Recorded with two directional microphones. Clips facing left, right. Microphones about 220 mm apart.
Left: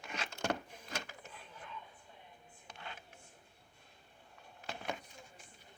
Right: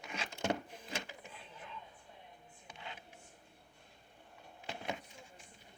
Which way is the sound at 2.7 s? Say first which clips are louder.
Even; 15° right (ahead or behind).